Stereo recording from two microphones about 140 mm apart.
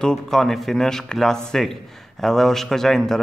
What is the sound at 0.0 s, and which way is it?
A man's voice, 5° left (ahead or behind).